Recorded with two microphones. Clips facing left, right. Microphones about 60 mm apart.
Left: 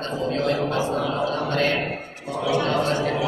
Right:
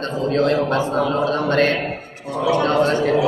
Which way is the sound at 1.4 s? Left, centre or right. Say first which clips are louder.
Right 5 dB; right.